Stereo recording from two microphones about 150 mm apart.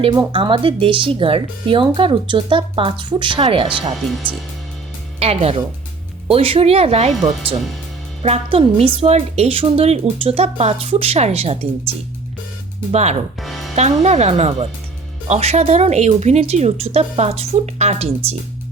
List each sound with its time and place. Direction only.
0.1 s speech: 30° right (ahead or behind)
4.2 s speech: 10° right (ahead or behind)
5.2 s speech: 45° right (ahead or behind)
13.4 s music: centre (ahead or behind)
13.7 s speech: 50° right (ahead or behind)